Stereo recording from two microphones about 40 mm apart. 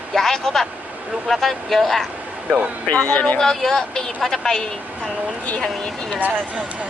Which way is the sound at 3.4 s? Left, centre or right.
Centre.